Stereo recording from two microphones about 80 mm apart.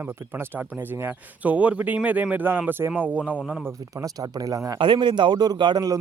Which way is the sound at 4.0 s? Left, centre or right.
Right.